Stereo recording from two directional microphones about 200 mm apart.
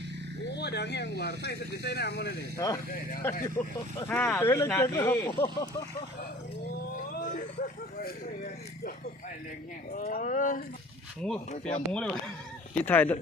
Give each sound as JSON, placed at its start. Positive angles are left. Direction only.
{"t": 0.5, "sound": "speech", "side_deg": 55}
{"t": 2.6, "sound": "speech", "side_deg": 15}
{"t": 6.9, "sound": "a sound", "side_deg": 45}
{"t": 10.0, "sound": "speech", "side_deg": 45}
{"t": 11.6, "sound": "speech", "side_deg": 5}